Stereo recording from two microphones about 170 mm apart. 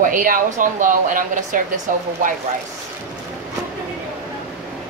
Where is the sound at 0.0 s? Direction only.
50° right (ahead or behind).